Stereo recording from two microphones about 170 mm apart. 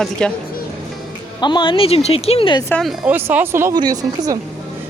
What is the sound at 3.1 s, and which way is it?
Speech, 10° right (ahead or behind).